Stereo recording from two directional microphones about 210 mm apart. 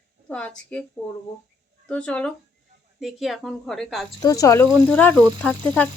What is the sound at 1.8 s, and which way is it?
Speech, 5° left (ahead or behind).